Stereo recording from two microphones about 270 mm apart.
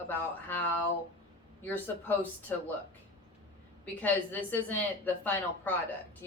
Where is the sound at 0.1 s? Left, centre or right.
Centre.